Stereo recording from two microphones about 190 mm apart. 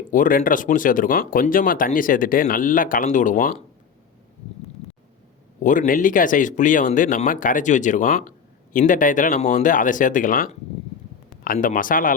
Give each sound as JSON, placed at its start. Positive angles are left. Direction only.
{"t": 0.1, "sound": "speech", "side_deg": 45}
{"t": 5.6, "sound": "speech", "side_deg": 45}